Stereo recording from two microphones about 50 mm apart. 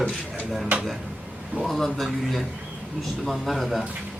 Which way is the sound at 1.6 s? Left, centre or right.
Centre.